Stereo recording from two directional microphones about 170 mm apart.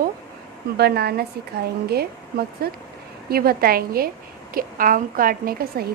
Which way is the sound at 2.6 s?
65° right (ahead or behind).